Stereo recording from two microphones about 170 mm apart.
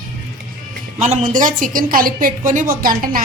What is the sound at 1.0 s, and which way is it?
A woman's voice, 45° right (ahead or behind).